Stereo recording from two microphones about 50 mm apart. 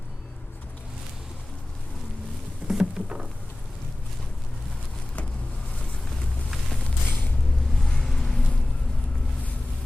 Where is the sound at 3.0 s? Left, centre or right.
Centre.